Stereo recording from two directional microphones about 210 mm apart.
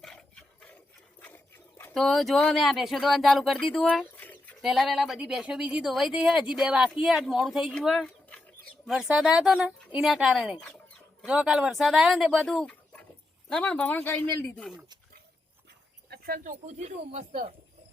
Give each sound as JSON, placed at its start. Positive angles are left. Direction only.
{"t": 0.0, "sound": "a sound", "side_deg": 5}
{"t": 1.8, "sound": "a child's voice", "side_deg": 0}
{"t": 16.0, "sound": "speech", "side_deg": -45}